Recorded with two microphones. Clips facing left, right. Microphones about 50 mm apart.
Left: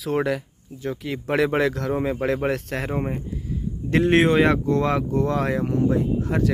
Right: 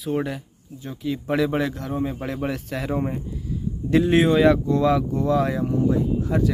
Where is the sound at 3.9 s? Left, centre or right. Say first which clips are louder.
Even; left.